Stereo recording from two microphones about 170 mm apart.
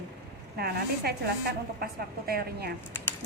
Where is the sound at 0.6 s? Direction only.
65° right (ahead or behind).